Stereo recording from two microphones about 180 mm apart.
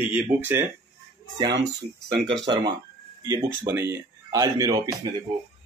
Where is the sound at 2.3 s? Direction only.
25° right (ahead or behind).